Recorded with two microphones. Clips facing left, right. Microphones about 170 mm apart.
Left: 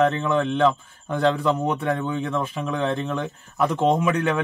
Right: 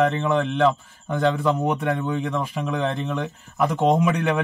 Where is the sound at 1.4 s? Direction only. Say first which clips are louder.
Right 1 dB; 10° right (ahead or behind).